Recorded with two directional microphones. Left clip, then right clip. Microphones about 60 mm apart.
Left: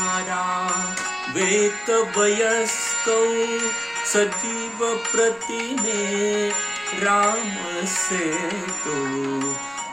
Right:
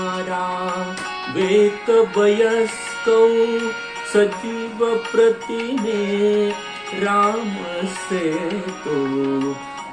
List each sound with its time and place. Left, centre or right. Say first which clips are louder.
0.0 s mantra: right 1 dB; centre
1.4 s music: right 5 dB; centre